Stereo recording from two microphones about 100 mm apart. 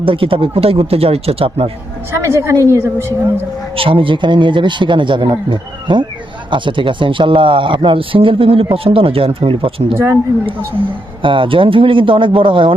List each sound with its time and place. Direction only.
0.0 s a man's voice: 60° right (ahead or behind)
2.1 s a woman's voice: 25° right (ahead or behind)
3.8 s a man's voice: 65° right (ahead or behind)
11.2 s speech: 60° right (ahead or behind)